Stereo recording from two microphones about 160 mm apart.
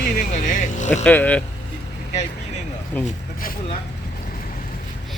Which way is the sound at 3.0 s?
65° left (ahead or behind).